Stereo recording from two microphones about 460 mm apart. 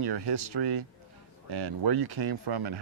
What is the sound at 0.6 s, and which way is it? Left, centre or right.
Speech, right.